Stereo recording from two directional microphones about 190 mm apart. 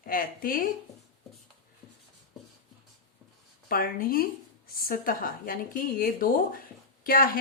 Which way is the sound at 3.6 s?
50° left (ahead or behind).